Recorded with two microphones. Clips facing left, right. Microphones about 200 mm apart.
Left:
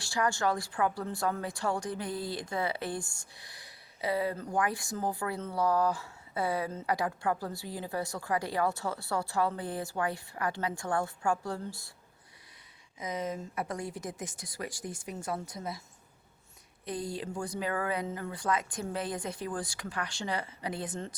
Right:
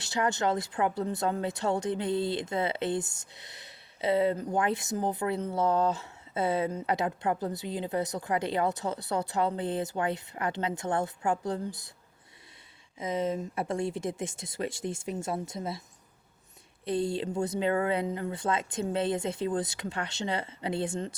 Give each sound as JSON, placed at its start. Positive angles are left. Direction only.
{"t": 0.0, "sound": "speech", "side_deg": -20}
{"t": 13.0, "sound": "speech", "side_deg": -25}
{"t": 16.8, "sound": "speech", "side_deg": -25}